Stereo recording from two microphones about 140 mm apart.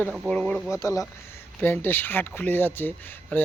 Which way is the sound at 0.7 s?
20° left (ahead or behind).